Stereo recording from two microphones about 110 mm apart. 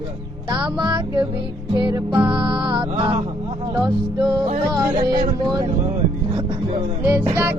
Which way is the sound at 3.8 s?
35° right (ahead or behind).